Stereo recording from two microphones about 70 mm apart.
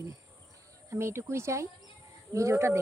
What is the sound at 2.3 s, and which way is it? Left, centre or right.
Music, right.